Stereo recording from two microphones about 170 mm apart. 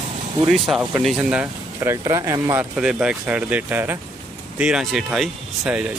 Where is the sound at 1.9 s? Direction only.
20° right (ahead or behind).